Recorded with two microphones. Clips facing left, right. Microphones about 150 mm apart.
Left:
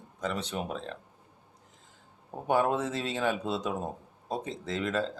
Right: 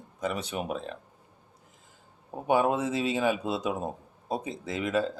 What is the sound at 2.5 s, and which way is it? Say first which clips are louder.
Speech: right 2 dB; 10° right (ahead or behind).